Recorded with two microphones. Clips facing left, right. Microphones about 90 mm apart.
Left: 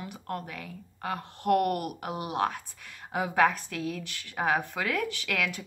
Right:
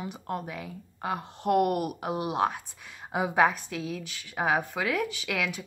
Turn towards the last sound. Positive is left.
turn(degrees=-5)  # may be behind; listen again after turning